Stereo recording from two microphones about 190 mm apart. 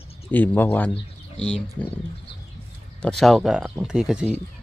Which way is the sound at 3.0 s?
Centre (ahead or behind).